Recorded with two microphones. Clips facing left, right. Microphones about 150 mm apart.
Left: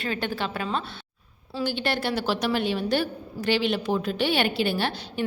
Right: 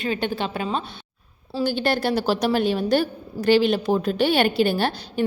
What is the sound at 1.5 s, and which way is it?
A woman's voice, 40° right (ahead or behind).